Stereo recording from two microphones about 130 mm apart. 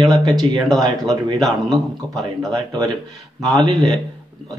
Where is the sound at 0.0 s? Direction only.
30° right (ahead or behind).